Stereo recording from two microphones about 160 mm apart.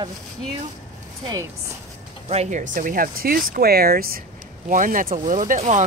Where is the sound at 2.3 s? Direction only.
45° right (ahead or behind); by 4.2 s 65° right (ahead or behind).